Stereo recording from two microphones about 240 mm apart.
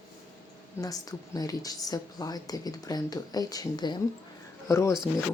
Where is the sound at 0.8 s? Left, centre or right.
Centre.